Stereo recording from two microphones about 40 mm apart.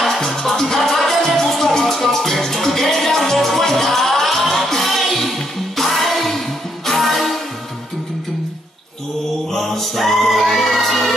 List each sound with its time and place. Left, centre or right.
0.0 s music: centre
9.5 s music: centre